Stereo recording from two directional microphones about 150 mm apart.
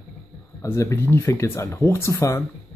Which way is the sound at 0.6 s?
15° left (ahead or behind).